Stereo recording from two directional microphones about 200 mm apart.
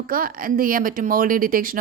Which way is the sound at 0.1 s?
45° right (ahead or behind).